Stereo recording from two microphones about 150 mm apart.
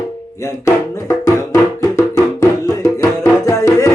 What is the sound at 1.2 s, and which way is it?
Music, 20° left (ahead or behind).